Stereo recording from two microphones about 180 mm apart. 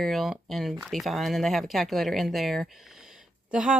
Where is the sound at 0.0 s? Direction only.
Centre (ahead or behind).